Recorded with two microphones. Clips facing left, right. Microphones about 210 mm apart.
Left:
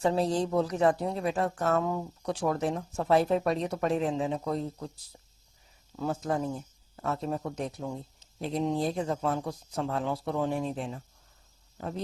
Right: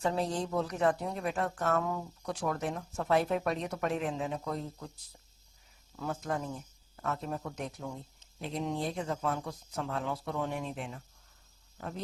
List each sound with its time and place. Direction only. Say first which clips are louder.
0.0 s speech: left 5 dB; 30° left (ahead or behind)
6.0 s speech: left 5 dB; 30° left (ahead or behind)